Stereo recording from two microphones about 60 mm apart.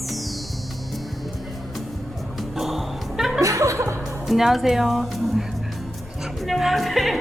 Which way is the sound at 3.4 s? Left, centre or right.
Right.